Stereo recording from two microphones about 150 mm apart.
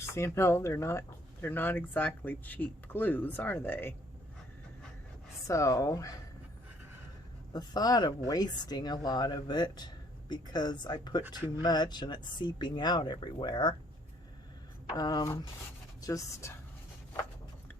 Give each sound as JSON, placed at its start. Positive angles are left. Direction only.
{"t": 0.1, "sound": "speech", "side_deg": 20}
{"t": 5.5, "sound": "speech", "side_deg": 20}
{"t": 7.5, "sound": "speech", "side_deg": 25}
{"t": 14.9, "sound": "speech", "side_deg": 25}